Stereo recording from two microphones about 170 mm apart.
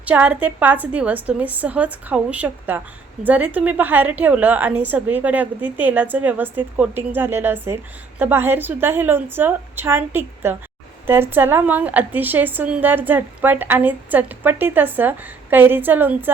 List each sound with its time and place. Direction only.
0.0 s a woman's voice: 10° right (ahead or behind)